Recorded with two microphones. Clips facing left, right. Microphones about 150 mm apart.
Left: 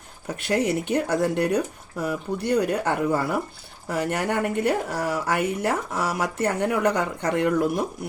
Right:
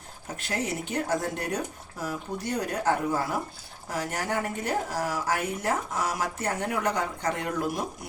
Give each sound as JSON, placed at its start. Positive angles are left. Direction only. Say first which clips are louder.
{"t": 0.3, "sound": "speech", "louder": "left 8 dB", "side_deg": 65}